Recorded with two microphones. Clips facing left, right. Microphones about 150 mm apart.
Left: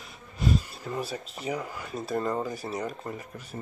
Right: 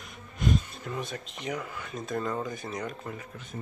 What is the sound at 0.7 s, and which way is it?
Speech, 5° left (ahead or behind).